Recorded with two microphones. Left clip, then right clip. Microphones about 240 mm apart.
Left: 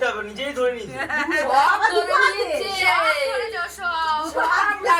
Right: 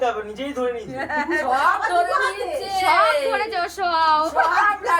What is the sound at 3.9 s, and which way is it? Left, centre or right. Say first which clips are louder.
Speech: right 5 dB; right.